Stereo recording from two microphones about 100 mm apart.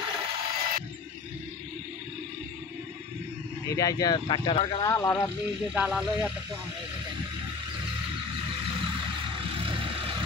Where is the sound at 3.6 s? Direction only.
35° left (ahead or behind).